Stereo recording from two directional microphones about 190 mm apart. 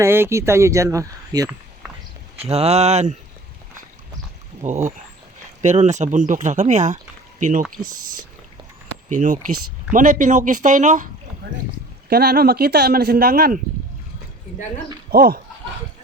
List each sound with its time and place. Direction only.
0.0 s speech: 15° right (ahead or behind)
2.4 s speech: 35° right (ahead or behind)
4.6 s speech: 40° right (ahead or behind)
12.0 s speech: 55° right (ahead or behind)
15.1 s speech: 50° right (ahead or behind)